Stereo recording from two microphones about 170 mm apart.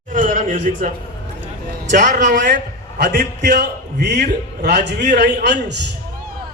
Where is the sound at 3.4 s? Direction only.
55° right (ahead or behind).